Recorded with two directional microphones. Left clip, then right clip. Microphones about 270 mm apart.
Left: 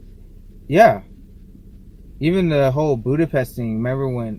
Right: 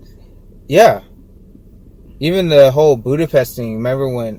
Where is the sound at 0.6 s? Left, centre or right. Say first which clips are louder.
Right 3 dB; centre.